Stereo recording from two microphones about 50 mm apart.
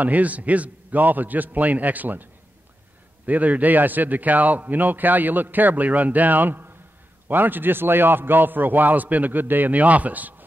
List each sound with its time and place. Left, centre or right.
0.0 s a man's voice: right
3.3 s a man's voice: right